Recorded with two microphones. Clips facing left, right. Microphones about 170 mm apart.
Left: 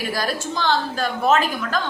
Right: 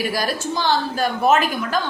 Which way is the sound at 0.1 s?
10° right (ahead or behind).